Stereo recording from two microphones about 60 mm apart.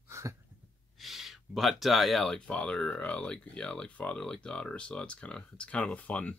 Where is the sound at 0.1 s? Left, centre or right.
Right.